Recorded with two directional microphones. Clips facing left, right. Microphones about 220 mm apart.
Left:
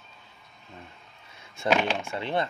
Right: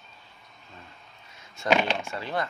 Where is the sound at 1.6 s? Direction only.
5° left (ahead or behind).